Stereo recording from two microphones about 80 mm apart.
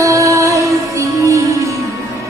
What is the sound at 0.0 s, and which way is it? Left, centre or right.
Music, right.